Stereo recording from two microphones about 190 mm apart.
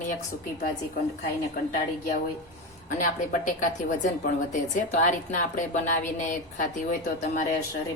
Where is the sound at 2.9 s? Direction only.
40° left (ahead or behind).